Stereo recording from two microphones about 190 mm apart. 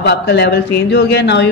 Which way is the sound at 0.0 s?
60° left (ahead or behind).